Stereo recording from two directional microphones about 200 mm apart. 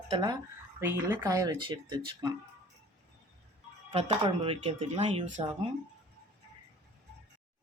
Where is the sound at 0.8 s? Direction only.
10° right (ahead or behind).